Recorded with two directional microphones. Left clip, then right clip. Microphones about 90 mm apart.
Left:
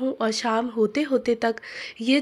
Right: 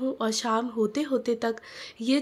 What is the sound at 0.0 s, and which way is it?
Speech, 35° left (ahead or behind).